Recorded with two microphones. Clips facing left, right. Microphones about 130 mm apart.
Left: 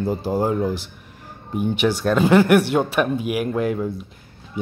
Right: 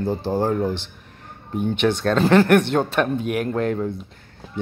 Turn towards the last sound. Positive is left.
turn(degrees=5)  # may be behind; listen again after turning